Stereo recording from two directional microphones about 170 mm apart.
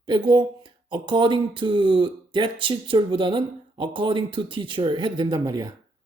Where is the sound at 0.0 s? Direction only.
25° right (ahead or behind).